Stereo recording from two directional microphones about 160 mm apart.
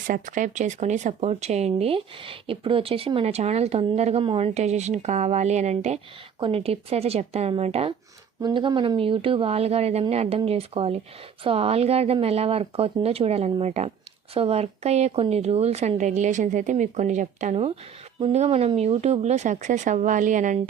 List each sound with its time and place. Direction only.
0.1 s speech: 55° right (ahead or behind)
8.4 s speech: 30° right (ahead or behind); by 20.6 s 55° right (ahead or behind)